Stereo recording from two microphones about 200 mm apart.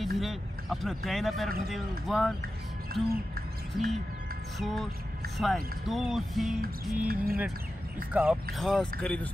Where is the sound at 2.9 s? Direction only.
50° right (ahead or behind).